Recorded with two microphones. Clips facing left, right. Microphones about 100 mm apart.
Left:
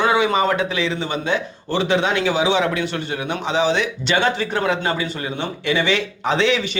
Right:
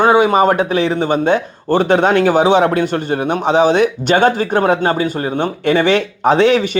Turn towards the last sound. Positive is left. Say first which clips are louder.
# right 7 dB
turn(degrees=-50)  # may be behind; listen again after turning